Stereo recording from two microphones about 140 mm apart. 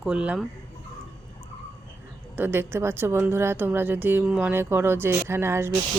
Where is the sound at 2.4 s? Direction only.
15° right (ahead or behind).